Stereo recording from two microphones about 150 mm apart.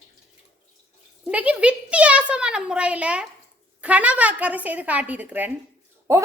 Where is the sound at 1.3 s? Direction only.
10° right (ahead or behind).